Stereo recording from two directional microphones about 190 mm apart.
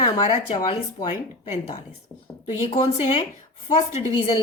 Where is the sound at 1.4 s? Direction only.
35° left (ahead or behind).